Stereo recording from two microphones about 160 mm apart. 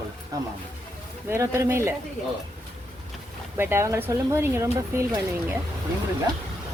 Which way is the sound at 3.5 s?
15° right (ahead or behind).